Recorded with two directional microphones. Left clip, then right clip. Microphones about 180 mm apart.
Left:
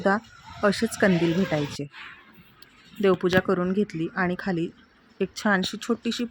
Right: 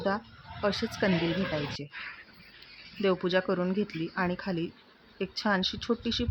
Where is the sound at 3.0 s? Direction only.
20° left (ahead or behind).